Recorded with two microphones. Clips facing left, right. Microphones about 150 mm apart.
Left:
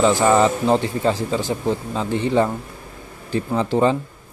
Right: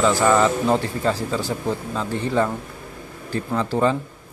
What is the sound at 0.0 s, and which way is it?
Speech, 20° left (ahead or behind).